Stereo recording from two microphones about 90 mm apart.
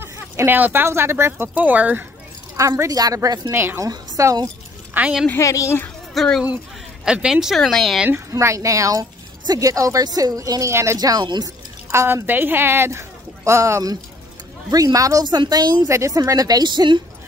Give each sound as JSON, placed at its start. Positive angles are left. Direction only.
{"t": 0.0, "sound": "speech", "side_deg": -25}
{"t": 2.9, "sound": "a woman's voice", "side_deg": -40}
{"t": 3.5, "sound": "speech", "side_deg": -25}
{"t": 3.8, "sound": "a woman's voice", "side_deg": -40}
{"t": 5.0, "sound": "speech", "side_deg": -20}
{"t": 5.4, "sound": "a woman's voice", "side_deg": 35}
{"t": 6.1, "sound": "speech", "side_deg": 5}
{"t": 7.1, "sound": "speech", "side_deg": -10}
{"t": 8.1, "sound": "speech", "side_deg": -30}
{"t": 11.0, "sound": "a woman's voice", "side_deg": -45}
{"t": 11.9, "sound": "speech", "side_deg": -30}
{"t": 15.2, "sound": "a woman's voice", "side_deg": -55}
{"t": 15.9, "sound": "a woman's voice", "side_deg": -35}